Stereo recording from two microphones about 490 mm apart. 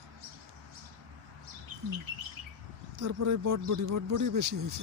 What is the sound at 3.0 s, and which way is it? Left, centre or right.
Speech, right.